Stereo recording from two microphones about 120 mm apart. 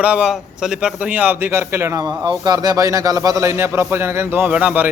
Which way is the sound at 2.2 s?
35° right (ahead or behind).